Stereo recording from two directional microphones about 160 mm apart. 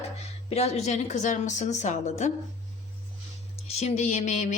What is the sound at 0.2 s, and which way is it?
Speech, 40° left (ahead or behind).